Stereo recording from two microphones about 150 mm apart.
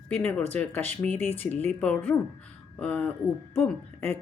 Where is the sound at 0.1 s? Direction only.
10° left (ahead or behind).